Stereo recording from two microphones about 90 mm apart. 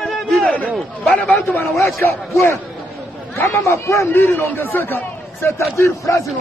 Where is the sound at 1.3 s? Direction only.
25° left (ahead or behind).